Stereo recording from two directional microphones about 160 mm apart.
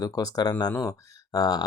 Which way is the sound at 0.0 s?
20° left (ahead or behind).